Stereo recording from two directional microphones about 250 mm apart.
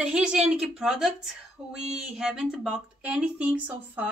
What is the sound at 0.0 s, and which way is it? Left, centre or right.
Speech, centre.